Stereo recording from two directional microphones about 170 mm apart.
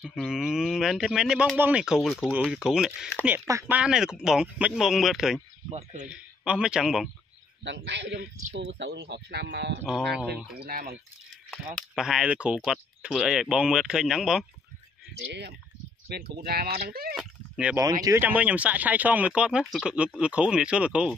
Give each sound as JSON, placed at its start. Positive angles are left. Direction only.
{"t": 0.0, "sound": "speech", "side_deg": -5}
{"t": 3.3, "sound": "speech", "side_deg": -15}
{"t": 3.7, "sound": "speech", "side_deg": -5}
{"t": 5.7, "sound": "speech", "side_deg": -40}
{"t": 6.0, "sound": "speech", "side_deg": -5}
{"t": 7.6, "sound": "a man's voice", "side_deg": -90}
{"t": 10.6, "sound": "speech", "side_deg": -55}
{"t": 11.5, "sound": "speech", "side_deg": 0}
{"t": 16.1, "sound": "speech", "side_deg": -65}
{"t": 17.1, "sound": "a sound", "side_deg": -5}
{"t": 18.0, "sound": "speech", "side_deg": -15}